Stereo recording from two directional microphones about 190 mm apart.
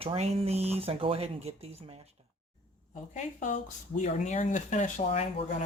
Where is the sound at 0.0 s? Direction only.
30° right (ahead or behind).